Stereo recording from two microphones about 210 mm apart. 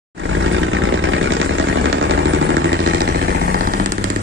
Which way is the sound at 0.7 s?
65° right (ahead or behind).